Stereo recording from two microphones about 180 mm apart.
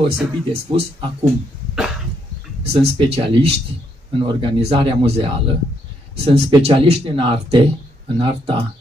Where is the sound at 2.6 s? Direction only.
35° right (ahead or behind).